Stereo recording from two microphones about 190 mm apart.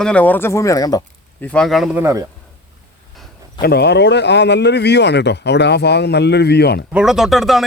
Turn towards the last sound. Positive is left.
turn(degrees=0)  # may be behind; listen again after turning